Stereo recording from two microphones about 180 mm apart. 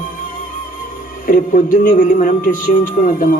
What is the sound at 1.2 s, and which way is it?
A man's voice, 50° left (ahead or behind).